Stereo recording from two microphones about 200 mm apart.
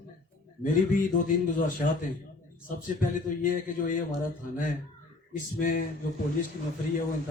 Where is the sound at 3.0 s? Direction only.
40° left (ahead or behind).